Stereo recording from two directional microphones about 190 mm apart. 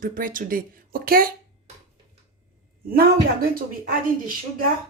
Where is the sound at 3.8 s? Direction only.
50° right (ahead or behind).